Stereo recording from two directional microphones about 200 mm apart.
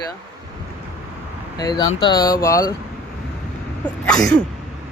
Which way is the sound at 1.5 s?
20° left (ahead or behind).